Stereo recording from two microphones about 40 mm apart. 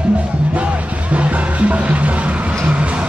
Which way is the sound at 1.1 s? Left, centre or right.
Right.